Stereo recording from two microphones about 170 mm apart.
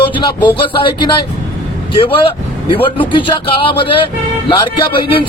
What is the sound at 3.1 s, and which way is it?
Speech, 30° left (ahead or behind).